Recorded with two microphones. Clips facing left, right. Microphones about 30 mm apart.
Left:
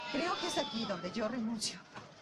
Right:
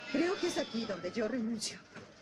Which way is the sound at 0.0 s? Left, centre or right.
Centre.